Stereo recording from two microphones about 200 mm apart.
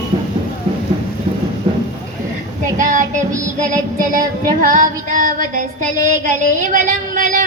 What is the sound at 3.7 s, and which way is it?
Child singing, 40° right (ahead or behind).